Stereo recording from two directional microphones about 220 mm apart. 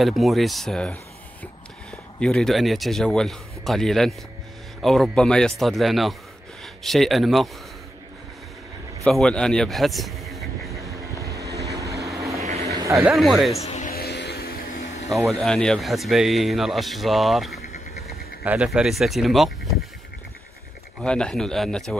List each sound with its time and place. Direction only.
0.0 s speech: centre (ahead or behind)
9.0 s a man's voice: centre (ahead or behind)
10.7 s vehicle: 15° right (ahead or behind)
12.4 s vehicle: 30° right (ahead or behind)
12.6 s a sound: 15° right (ahead or behind)
13.1 s speech: centre (ahead or behind)
13.6 s a sound: 30° left (ahead or behind); by 14.5 s 50° left (ahead or behind)
15.0 s speech: centre (ahead or behind)
17.6 s insect: 45° left (ahead or behind)
18.0 s speech: 5° right (ahead or behind)
21.0 s speech: 5° left (ahead or behind)